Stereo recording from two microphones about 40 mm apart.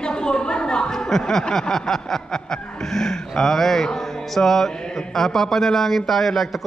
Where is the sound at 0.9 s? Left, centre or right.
Centre.